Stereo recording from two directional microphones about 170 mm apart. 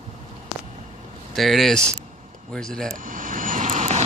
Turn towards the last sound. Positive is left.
turn(degrees=-40)  # may be behind; listen again after turning